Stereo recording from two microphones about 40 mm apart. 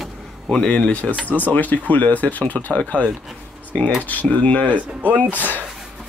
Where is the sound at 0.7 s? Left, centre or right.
Left.